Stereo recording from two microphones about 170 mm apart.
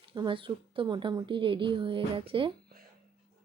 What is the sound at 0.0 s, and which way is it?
Speech, 30° right (ahead or behind).